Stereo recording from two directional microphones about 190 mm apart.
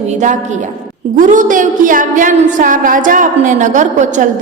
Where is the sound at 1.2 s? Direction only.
45° right (ahead or behind).